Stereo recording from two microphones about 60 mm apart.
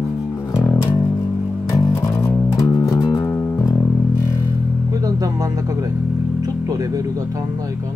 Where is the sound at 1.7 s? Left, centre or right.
Left.